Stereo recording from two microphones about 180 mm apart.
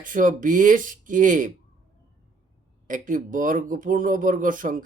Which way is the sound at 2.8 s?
45° right (ahead or behind).